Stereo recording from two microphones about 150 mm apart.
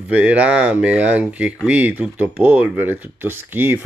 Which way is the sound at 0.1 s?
10° right (ahead or behind).